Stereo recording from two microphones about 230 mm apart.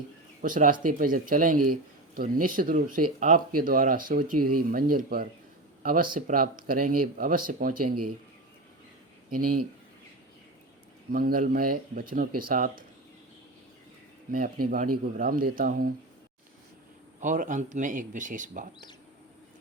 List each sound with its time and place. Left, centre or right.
0.4 s speech: right
1.5 s speech: right
2.1 s speech: right
4.4 s speech: right
4.7 s speech: right
11.1 s speech: right
14.3 s speech: right
17.2 s speech: right